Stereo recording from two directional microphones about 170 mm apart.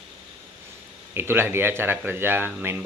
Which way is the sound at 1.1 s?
15° right (ahead or behind).